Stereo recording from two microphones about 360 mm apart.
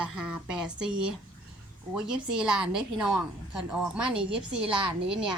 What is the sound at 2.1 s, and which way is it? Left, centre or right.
A woman's voice, centre.